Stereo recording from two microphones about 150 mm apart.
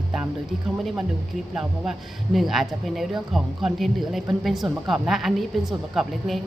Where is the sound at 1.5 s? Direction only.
Centre (ahead or behind).